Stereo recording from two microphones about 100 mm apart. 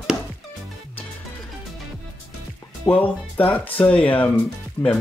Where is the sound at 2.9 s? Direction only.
15° left (ahead or behind).